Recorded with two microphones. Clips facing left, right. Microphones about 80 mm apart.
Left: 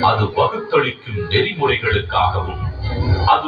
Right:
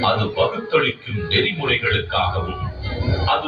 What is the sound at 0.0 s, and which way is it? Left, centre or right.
A man's voice, centre.